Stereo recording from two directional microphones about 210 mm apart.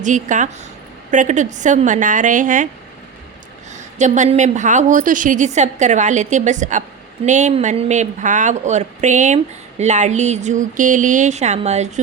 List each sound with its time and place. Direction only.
0.0 s speech: 35° right (ahead or behind)
3.9 s speech: 35° right (ahead or behind)